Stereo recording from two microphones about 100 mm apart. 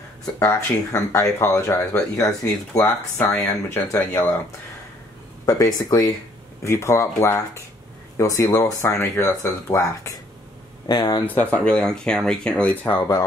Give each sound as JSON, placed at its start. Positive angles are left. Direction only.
{"t": 0.4, "sound": "speech", "side_deg": 30}
{"t": 5.5, "sound": "speech", "side_deg": 35}
{"t": 10.9, "sound": "speech", "side_deg": 45}
{"t": 11.2, "sound": "speech", "side_deg": 15}